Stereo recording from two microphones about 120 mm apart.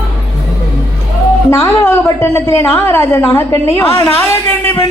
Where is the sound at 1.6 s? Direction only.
20° left (ahead or behind).